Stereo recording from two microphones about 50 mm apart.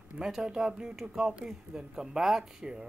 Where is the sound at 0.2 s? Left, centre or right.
Centre.